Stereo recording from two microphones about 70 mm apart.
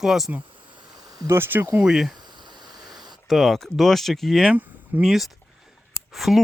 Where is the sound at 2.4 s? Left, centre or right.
Right.